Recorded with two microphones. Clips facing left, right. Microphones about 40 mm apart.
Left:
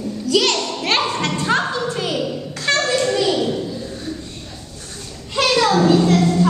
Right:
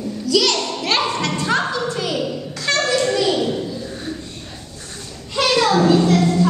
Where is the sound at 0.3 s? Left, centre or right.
Left.